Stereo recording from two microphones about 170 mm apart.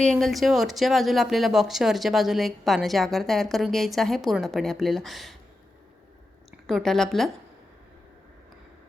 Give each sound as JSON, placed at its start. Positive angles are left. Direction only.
{"t": 0.0, "sound": "speech", "side_deg": 5}
{"t": 6.7, "sound": "speech", "side_deg": 0}